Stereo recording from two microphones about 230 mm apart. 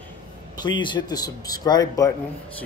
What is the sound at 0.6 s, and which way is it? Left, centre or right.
Speech, centre.